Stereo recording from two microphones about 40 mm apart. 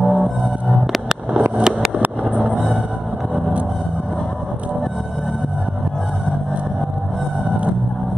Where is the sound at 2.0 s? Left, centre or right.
Right.